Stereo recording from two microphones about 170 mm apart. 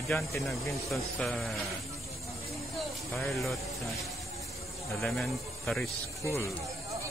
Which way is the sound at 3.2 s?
Centre (ahead or behind).